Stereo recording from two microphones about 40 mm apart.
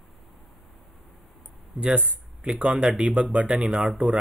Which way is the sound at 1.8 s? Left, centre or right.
Right.